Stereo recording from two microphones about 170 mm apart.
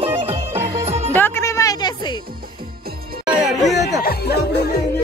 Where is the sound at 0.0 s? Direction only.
35° right (ahead or behind).